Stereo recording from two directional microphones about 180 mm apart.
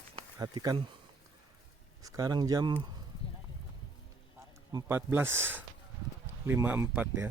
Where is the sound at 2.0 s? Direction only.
20° right (ahead or behind).